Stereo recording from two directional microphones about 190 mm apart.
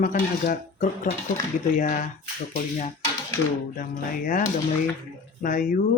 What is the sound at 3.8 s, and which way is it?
Speech, 45° left (ahead or behind).